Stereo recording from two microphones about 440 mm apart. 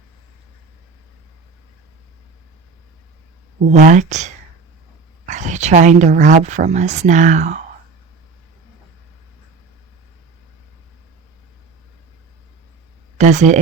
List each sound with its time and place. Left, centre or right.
3.6 s a woman's voice: centre
13.1 s speech: centre